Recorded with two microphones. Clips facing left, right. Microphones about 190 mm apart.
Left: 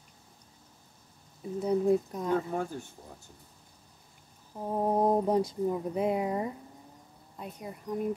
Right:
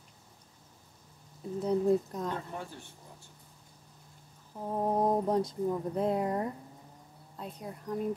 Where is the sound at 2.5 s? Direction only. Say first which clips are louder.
Left 8 dB; 45° left (ahead or behind).